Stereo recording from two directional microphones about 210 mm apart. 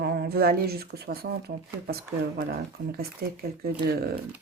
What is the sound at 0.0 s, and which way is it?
Speech, 50° right (ahead or behind).